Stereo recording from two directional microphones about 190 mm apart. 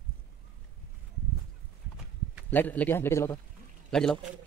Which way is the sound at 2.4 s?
10° left (ahead or behind).